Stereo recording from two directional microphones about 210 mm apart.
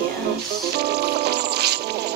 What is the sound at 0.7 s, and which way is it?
Music, 50° right (ahead or behind).